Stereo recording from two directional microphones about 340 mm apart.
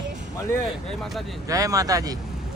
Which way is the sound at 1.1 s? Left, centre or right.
Centre.